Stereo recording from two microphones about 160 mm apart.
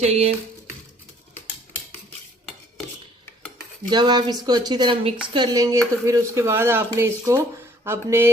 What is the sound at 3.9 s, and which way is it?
Speech, 25° right (ahead or behind).